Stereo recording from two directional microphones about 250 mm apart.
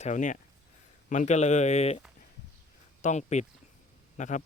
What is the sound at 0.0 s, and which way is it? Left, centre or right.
Speech, left.